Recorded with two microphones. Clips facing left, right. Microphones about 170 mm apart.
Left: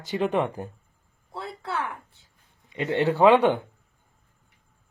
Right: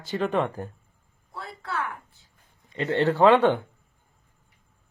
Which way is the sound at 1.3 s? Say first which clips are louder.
Left 1 dB; 25° left (ahead or behind).